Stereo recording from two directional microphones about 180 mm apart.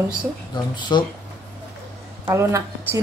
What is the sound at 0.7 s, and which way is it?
Cutlery, 25° left (ahead or behind).